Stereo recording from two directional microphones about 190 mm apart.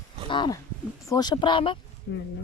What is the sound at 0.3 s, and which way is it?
Speech, 25° left (ahead or behind).